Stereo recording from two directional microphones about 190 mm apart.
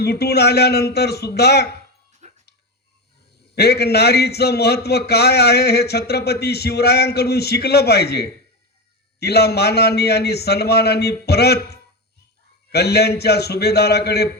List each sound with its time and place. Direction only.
0.0 s a man's voice: 55° left (ahead or behind)
2.2 s dog: 35° right (ahead or behind)
3.5 s a man's voice: 55° left (ahead or behind)